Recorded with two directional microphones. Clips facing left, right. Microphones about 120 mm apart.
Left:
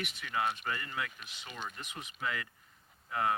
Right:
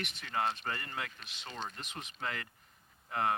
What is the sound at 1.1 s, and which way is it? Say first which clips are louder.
Speech: right 1 dB; 10° left (ahead or behind).